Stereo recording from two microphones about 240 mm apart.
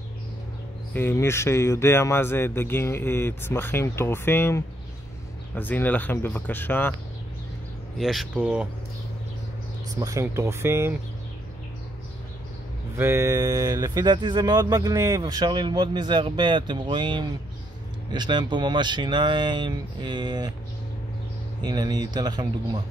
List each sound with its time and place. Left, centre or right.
0.9 s speech: centre
8.0 s speech: centre
9.8 s speech: centre
12.9 s speech: centre
21.6 s speech: centre